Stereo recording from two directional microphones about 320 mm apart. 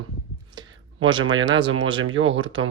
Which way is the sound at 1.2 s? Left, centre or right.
Right.